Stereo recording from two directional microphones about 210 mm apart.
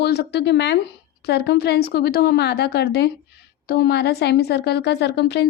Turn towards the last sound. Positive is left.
turn(degrees=55)  # may be behind; listen again after turning